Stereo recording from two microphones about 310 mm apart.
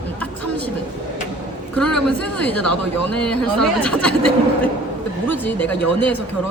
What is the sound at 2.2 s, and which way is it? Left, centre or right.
Speech, centre.